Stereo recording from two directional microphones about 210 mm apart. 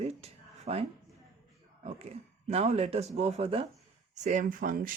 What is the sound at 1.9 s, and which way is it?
Speech, 30° right (ahead or behind).